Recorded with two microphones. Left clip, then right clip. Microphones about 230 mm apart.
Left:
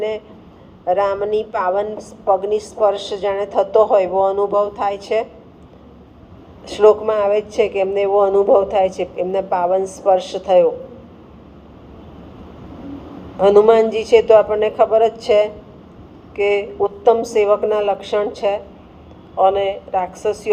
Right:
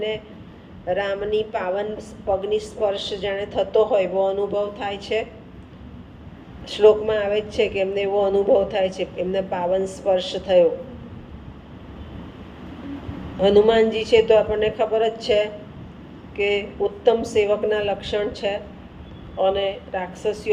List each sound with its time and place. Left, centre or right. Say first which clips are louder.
0.9 s a woman's voice: left 6 dB; left
6.7 s a woman's voice: left 3 dB; left
13.4 s a woman's voice: left 5 dB; left
16.3 s a woman's voice: left 5 dB; left